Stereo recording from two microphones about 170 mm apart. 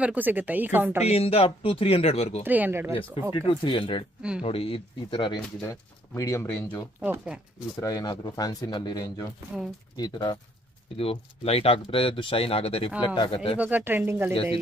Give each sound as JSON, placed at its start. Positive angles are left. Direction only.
{"t": 0.0, "sound": "speech", "side_deg": -10}
{"t": 1.0, "sound": "speech", "side_deg": 35}
{"t": 2.4, "sound": "speech", "side_deg": -10}
{"t": 3.3, "sound": "speech", "side_deg": 30}
{"t": 5.6, "sound": "speech", "side_deg": 20}
{"t": 7.0, "sound": "speech", "side_deg": -5}
{"t": 7.8, "sound": "speech", "side_deg": 20}
{"t": 13.6, "sound": "speech", "side_deg": -10}
{"t": 14.3, "sound": "speech", "side_deg": 30}